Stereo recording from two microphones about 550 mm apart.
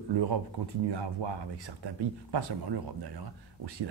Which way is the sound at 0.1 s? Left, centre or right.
Right.